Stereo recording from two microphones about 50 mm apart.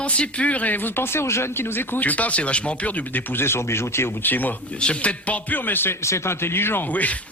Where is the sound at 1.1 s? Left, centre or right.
Left.